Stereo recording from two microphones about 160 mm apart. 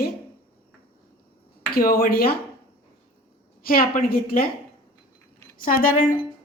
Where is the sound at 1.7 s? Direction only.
70° left (ahead or behind).